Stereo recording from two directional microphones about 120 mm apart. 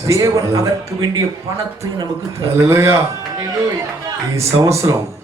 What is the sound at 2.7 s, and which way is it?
Speech, 25° right (ahead or behind).